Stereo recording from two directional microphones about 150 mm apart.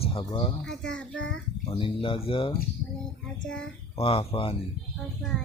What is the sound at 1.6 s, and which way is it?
Speech, 40° left (ahead or behind).